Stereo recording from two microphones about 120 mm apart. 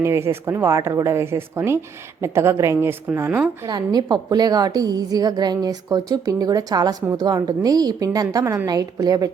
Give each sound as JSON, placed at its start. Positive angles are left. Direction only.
{"t": 0.0, "sound": "a woman's voice", "side_deg": -20}
{"t": 3.7, "sound": "a woman's voice", "side_deg": -35}